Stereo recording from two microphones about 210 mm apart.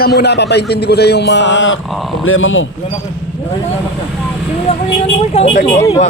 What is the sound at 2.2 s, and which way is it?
Speech, 70° left (ahead or behind).